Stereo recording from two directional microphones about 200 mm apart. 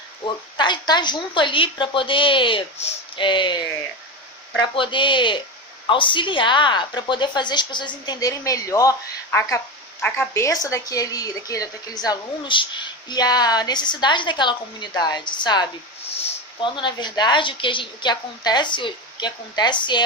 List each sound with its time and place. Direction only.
0.5 s a woman's voice: 20° left (ahead or behind)
4.7 s a woman's voice: 25° left (ahead or behind)